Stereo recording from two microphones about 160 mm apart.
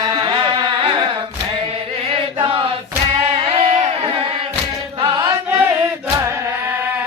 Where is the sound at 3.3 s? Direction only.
40° right (ahead or behind).